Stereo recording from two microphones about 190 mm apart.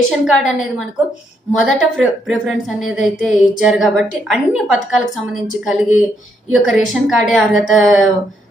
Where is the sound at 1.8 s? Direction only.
Centre (ahead or behind).